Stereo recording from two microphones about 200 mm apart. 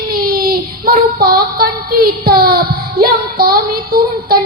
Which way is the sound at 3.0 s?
50° right (ahead or behind).